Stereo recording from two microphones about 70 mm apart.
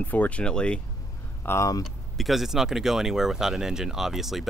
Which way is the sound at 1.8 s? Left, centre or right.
Centre.